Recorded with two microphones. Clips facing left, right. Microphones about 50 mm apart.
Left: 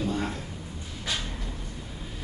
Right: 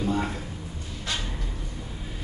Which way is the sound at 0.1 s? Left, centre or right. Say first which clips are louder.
Right 3 dB; centre.